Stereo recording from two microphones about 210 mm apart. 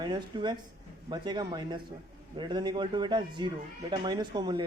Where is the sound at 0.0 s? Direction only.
20° right (ahead or behind).